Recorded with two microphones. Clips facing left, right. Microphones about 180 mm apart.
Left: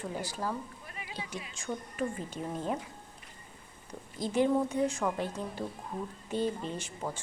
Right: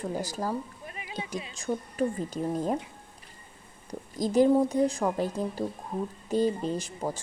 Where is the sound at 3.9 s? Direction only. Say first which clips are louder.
Right 6 dB; 40° right (ahead or behind).